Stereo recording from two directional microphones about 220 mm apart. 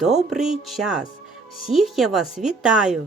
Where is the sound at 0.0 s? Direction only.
Centre (ahead or behind).